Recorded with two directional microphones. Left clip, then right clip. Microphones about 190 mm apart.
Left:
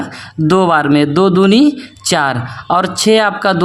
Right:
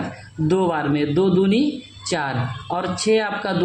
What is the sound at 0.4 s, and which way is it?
Speech, 55° left (ahead or behind).